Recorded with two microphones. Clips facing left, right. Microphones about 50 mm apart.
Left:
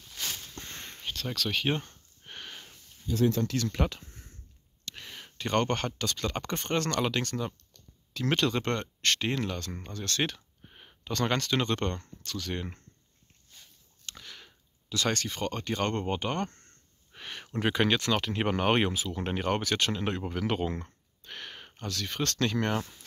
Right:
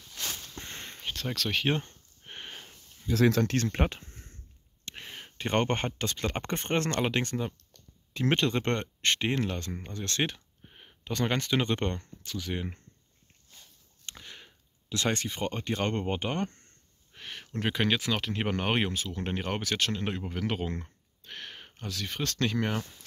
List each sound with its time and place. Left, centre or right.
0.6 s a sound: centre
2.2 s sniff: centre
3.1 s speech: right
3.6 s speech: right
9.7 s speech: centre
9.9 s speech: right
10.6 s a sound: centre
11.1 s speech: centre
14.0 s speech: centre
17.1 s speech: centre